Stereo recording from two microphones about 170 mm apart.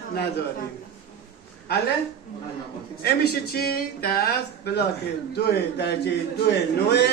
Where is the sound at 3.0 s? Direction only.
70° left (ahead or behind).